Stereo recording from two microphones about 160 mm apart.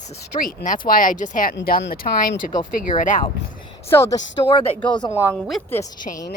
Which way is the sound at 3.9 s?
15° left (ahead or behind).